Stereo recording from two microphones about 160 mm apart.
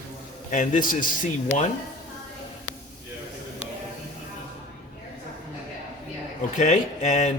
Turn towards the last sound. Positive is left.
turn(degrees=45)  # may be behind; listen again after turning